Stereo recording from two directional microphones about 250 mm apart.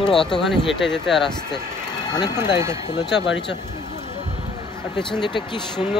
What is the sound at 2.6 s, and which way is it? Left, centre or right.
Speech, centre.